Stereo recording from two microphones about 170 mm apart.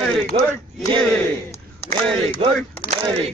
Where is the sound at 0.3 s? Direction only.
30° right (ahead or behind).